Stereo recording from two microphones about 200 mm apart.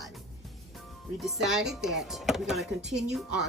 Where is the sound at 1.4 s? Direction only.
Centre (ahead or behind).